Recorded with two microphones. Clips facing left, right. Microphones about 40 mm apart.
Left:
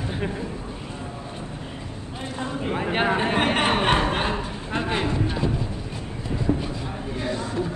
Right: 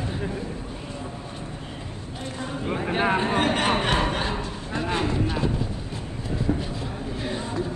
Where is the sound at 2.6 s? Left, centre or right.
Centre.